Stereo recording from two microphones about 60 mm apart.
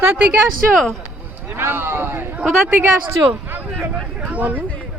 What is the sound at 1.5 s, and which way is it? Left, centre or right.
Speech, right.